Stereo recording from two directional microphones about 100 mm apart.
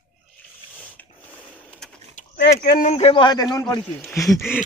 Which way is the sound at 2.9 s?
75° left (ahead or behind).